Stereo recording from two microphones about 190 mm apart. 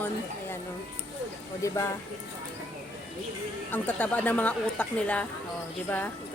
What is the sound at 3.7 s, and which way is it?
A woman's voice, 10° left (ahead or behind).